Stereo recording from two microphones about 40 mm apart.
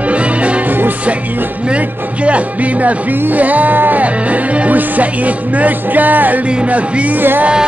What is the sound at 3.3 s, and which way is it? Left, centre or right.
Music, right.